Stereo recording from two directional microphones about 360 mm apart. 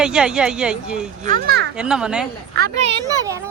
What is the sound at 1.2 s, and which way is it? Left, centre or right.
Speech, right.